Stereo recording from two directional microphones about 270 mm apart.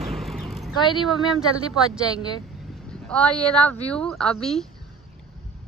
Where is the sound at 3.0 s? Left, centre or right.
Centre.